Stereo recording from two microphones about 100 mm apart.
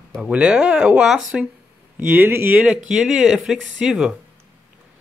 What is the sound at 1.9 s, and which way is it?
Speech, 15° right (ahead or behind).